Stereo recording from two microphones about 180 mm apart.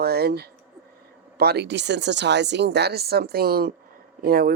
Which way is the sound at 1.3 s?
65° right (ahead or behind).